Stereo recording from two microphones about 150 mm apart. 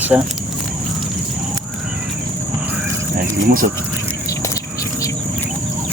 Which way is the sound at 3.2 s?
70° right (ahead or behind).